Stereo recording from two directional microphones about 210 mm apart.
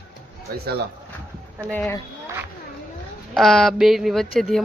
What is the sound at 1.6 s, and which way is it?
Speech, 5° left (ahead or behind).